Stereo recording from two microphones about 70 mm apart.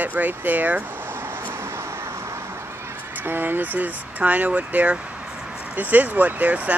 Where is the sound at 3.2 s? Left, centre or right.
Right.